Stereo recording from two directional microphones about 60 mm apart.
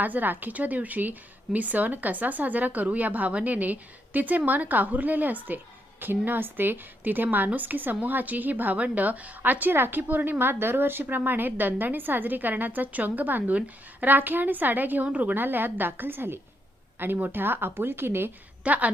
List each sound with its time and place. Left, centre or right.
0.0 s a woman's voice: right
18.6 s a woman's voice: right